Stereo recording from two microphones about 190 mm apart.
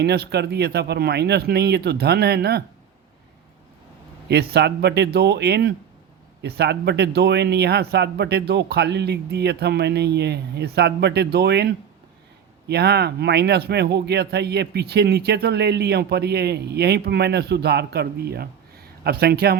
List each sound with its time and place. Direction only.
0.0 s speech: 60° right (ahead or behind)
4.3 s speech: 60° right (ahead or behind)